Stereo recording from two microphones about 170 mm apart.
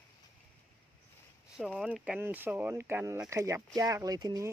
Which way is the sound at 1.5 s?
Centre (ahead or behind).